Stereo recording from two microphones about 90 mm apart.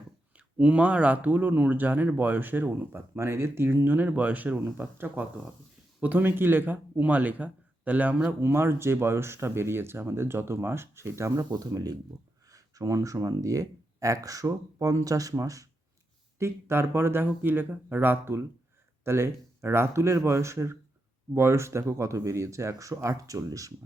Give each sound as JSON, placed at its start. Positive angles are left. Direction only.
{"t": 0.3, "sound": "speech", "side_deg": -15}
{"t": 16.4, "sound": "speech", "side_deg": -30}